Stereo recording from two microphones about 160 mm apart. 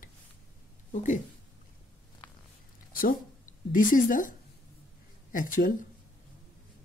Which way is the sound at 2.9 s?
60° left (ahead or behind).